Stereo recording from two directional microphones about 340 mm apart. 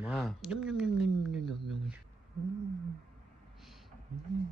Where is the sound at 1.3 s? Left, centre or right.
Centre.